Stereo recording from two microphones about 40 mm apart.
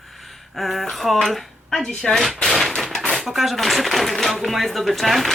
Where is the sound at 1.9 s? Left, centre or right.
Centre.